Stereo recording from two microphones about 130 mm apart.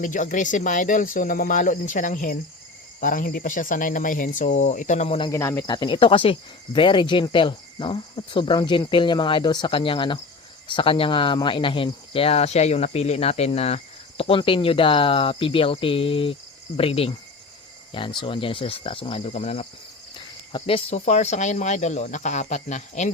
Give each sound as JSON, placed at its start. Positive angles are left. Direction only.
{"t": 0.0, "sound": "speech", "side_deg": 80}
{"t": 5.3, "sound": "speech", "side_deg": 20}
{"t": 5.6, "sound": "cricket", "side_deg": 35}
{"t": 10.7, "sound": "speech", "side_deg": 40}
{"t": 18.2, "sound": "speech", "side_deg": 40}
{"t": 20.5, "sound": "speech", "side_deg": 45}